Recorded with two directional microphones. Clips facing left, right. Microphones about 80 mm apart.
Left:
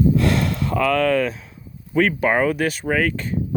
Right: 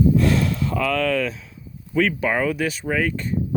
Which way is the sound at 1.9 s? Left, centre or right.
Left.